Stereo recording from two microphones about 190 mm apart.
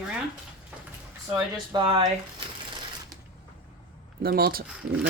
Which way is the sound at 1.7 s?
20° right (ahead or behind).